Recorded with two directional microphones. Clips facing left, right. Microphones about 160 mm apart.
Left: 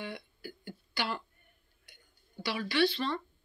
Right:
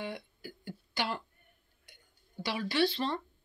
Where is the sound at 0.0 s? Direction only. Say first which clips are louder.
Right 1 dB; 45° right (ahead or behind).